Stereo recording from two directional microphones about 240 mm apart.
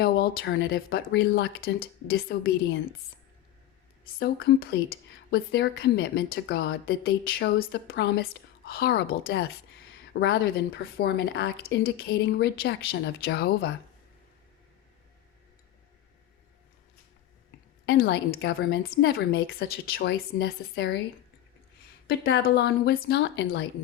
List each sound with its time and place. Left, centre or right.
0.0 s speech: left
4.2 s a woman's voice: left
17.8 s speech: left
22.0 s a woman's voice: left